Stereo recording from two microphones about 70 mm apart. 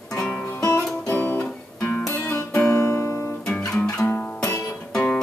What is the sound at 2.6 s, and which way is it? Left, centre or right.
Music, left.